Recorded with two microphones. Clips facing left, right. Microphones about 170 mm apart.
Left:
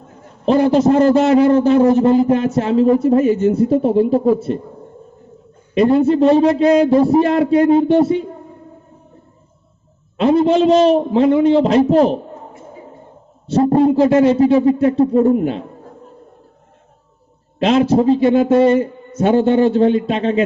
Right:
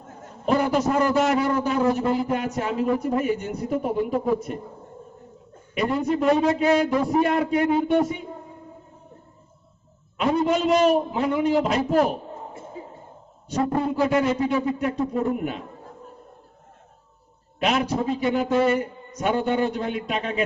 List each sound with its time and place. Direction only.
0.4 s a man's voice: 30° left (ahead or behind)
3.2 s speech: 15° right (ahead or behind)
3.7 s a man's voice: 30° left (ahead or behind)
5.7 s a man's voice: 30° left (ahead or behind)
10.2 s a man's voice: 30° left (ahead or behind)
13.5 s a man's voice: 35° left (ahead or behind)
17.6 s a man's voice: 30° left (ahead or behind)